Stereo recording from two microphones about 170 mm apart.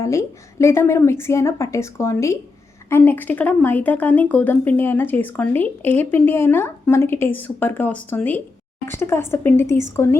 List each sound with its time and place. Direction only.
0.0 s speech: 20° left (ahead or behind)